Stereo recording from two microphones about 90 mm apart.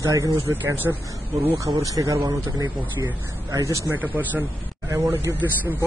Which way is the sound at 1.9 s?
40° right (ahead or behind).